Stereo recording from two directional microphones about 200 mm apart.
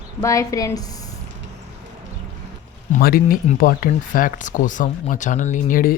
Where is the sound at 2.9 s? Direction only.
45° left (ahead or behind).